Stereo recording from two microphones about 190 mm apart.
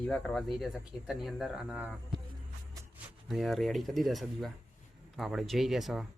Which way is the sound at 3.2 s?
Centre (ahead or behind).